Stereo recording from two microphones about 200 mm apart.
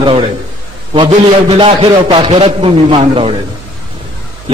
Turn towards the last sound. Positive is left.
turn(degrees=-30)  # may be behind; listen again after turning